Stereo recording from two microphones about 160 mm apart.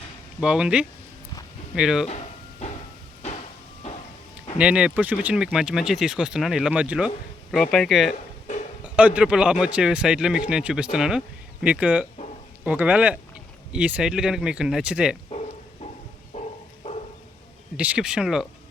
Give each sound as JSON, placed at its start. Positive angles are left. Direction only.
{"t": 0.4, "sound": "speech", "side_deg": -5}
{"t": 2.0, "sound": "a sound", "side_deg": 45}
{"t": 4.5, "sound": "speech", "side_deg": -5}
{"t": 7.5, "sound": "a man's voice", "side_deg": 5}
{"t": 15.3, "sound": "bow-wow", "side_deg": 40}
{"t": 16.3, "sound": "a sound", "side_deg": 45}
{"t": 17.7, "sound": "speech", "side_deg": -5}